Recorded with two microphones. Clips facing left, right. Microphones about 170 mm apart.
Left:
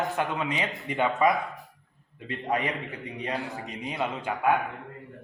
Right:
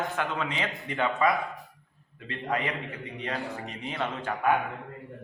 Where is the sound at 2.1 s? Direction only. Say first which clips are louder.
Left 2 dB; 20° left (ahead or behind).